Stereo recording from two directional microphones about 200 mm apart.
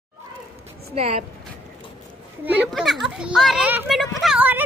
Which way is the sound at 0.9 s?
30° right (ahead or behind).